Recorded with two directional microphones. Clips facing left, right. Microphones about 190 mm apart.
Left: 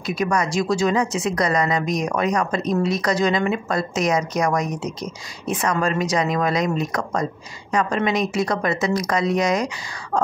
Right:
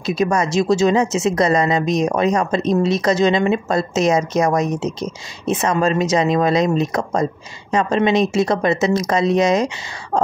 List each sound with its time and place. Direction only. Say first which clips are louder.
0.0 s speech: right 4 dB; 25° right (ahead or behind)